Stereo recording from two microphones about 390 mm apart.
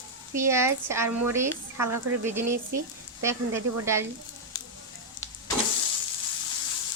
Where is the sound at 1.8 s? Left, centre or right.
Right.